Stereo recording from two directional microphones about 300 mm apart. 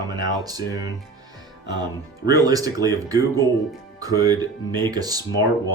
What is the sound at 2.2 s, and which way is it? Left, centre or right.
Speech, centre.